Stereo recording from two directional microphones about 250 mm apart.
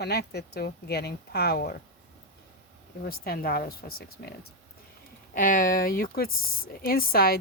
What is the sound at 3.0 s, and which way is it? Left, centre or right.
Speech, left.